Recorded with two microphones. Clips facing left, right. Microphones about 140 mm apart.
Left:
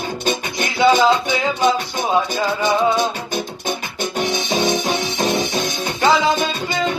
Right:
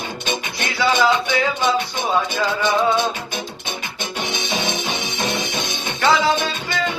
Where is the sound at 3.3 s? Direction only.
45° left (ahead or behind).